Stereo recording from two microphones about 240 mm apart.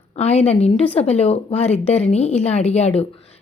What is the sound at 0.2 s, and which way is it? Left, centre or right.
A woman's voice, left.